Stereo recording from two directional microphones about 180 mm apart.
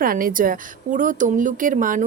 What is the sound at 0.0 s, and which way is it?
A woman's voice, 50° right (ahead or behind).